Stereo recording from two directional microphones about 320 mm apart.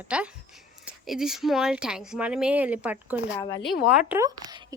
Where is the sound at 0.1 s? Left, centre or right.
Centre.